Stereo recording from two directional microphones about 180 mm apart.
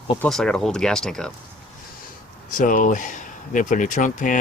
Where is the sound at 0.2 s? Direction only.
5° left (ahead or behind).